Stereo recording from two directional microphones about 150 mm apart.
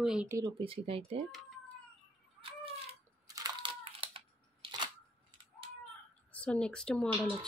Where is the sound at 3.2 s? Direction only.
25° right (ahead or behind).